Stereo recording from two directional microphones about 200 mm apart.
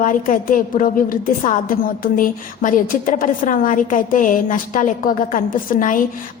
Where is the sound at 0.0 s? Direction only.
40° left (ahead or behind).